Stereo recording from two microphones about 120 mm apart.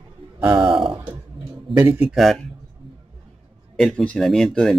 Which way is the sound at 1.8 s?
20° right (ahead or behind).